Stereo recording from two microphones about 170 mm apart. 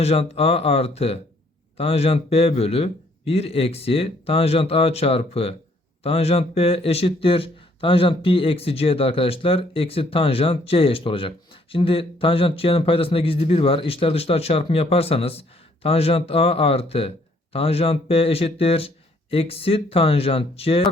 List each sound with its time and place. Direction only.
0.0 s speech: 35° left (ahead or behind)